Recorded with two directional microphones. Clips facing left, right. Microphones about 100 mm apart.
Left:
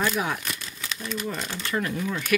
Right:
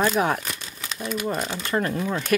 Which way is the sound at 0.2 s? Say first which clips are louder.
Right 6 dB; 45° right (ahead or behind).